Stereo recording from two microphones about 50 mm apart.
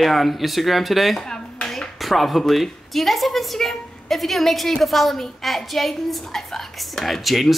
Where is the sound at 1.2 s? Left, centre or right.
Centre.